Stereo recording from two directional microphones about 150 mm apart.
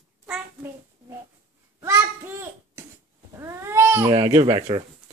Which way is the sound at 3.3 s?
20° right (ahead or behind).